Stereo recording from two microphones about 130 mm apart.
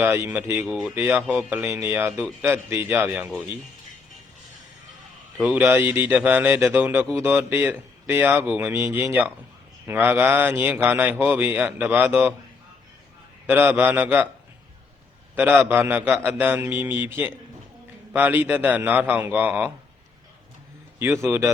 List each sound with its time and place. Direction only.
0.0 s speech: 15° right (ahead or behind)
0.6 s speech: 5° right (ahead or behind)
2.5 s speech: 20° right (ahead or behind)
5.4 s speech: 5° right (ahead or behind)
13.5 s speech: 15° right (ahead or behind)
15.7 s speech: 15° right (ahead or behind)
21.0 s speech: 20° right (ahead or behind)